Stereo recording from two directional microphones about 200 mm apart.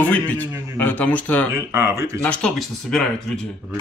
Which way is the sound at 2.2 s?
5° left (ahead or behind).